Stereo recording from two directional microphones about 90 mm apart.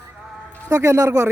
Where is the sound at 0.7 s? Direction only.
35° right (ahead or behind).